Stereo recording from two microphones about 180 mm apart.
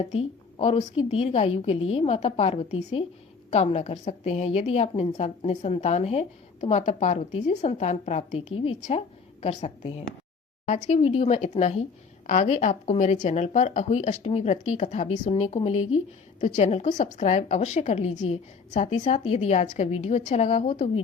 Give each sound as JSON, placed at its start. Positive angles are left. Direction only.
{"t": 0.0, "sound": "a woman's voice", "side_deg": 30}